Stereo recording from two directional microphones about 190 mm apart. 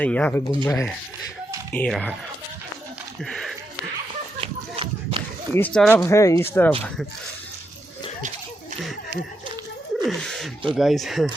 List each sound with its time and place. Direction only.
0.0 s speech: 5° left (ahead or behind)
3.2 s a sound: centre (ahead or behind)
4.4 s run: 25° right (ahead or behind)
5.5 s speech: 5° left (ahead or behind)
10.0 s speech: centre (ahead or behind)